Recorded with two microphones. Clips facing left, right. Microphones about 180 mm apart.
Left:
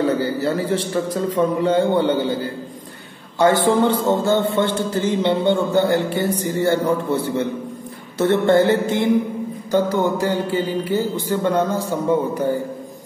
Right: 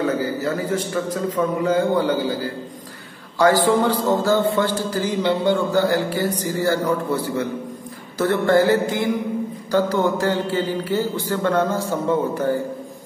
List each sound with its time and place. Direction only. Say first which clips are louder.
0.0 s a man's voice: left 2 dB; 30° left (ahead or behind)
8.2 s a man's voice: left 2 dB; 25° left (ahead or behind)